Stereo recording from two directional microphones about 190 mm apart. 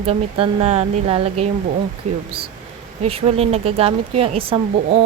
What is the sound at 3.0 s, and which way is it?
Speech, 30° right (ahead or behind).